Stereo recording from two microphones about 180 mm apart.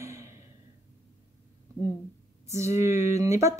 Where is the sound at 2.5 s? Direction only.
15° right (ahead or behind).